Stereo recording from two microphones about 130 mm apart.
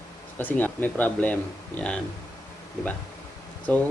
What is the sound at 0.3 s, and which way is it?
Speech, 15° left (ahead or behind).